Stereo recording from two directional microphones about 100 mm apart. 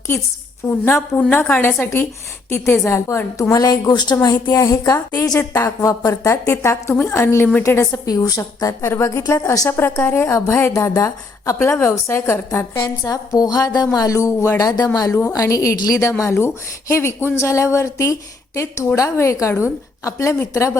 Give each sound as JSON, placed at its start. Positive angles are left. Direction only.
{"t": 0.6, "sound": "a woman's voice", "side_deg": 20}
{"t": 3.5, "sound": "a woman's voice", "side_deg": 40}
{"t": 8.0, "sound": "a woman's voice", "side_deg": 35}
{"t": 13.1, "sound": "a woman's voice", "side_deg": 40}